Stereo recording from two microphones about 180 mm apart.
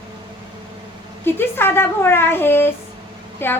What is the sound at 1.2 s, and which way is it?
Speech, 10° left (ahead or behind).